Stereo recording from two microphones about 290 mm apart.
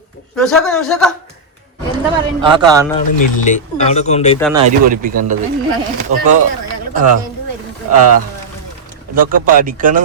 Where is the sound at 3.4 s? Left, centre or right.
Left.